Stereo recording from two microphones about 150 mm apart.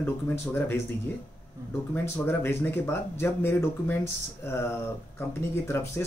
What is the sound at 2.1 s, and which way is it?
Speech, 15° left (ahead or behind).